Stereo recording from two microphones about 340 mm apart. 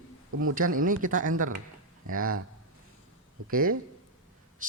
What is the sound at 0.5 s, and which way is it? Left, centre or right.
Speech, right.